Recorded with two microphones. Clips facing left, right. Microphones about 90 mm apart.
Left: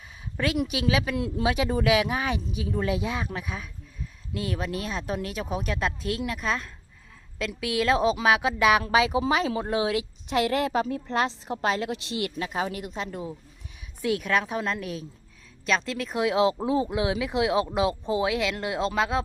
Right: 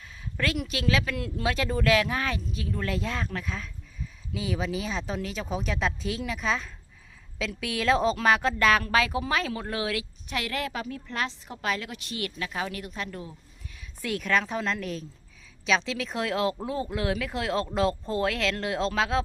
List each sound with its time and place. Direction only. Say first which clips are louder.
0.3 s a woman's voice: left 3 dB; 15° left (ahead or behind)
4.0 s a woman's voice: left 1 dB; centre (ahead or behind); by 13.3 s 25° left (ahead or behind)
14.0 s speech: left 2 dB; 5° left (ahead or behind)
16.3 s speech: left 6 dB; 20° left (ahead or behind)